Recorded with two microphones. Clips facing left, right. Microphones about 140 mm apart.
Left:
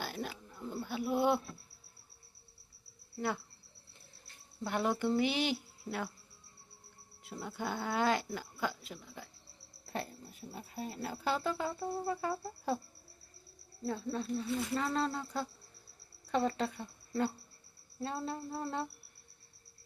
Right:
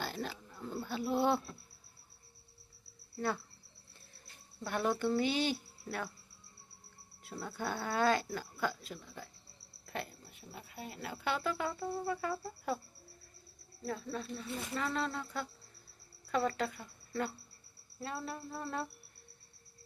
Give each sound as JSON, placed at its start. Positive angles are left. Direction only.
{"t": 0.0, "sound": "a sound", "side_deg": 10}
{"t": 3.2, "sound": "a woman's voice", "side_deg": 15}
{"t": 4.6, "sound": "a woman's voice", "side_deg": 15}
{"t": 7.3, "sound": "a woman's voice", "side_deg": 15}
{"t": 9.8, "sound": "speech", "side_deg": 35}
{"t": 13.8, "sound": "female singing", "side_deg": 25}
{"t": 14.8, "sound": "speech", "side_deg": 30}
{"t": 18.0, "sound": "female singing", "side_deg": 25}